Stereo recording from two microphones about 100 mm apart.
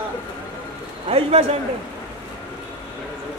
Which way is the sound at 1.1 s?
75° right (ahead or behind).